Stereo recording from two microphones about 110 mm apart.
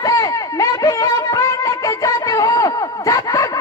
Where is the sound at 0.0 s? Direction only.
30° left (ahead or behind).